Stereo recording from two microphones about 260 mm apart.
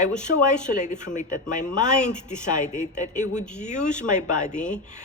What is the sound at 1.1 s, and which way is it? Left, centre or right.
Speech, left.